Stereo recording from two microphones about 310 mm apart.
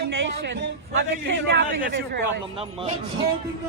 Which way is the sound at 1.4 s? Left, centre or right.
Right.